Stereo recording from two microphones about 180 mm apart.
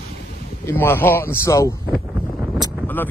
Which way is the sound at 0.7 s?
10° left (ahead or behind).